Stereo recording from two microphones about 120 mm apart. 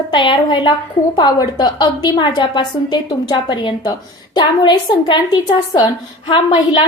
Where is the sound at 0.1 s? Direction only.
45° left (ahead or behind).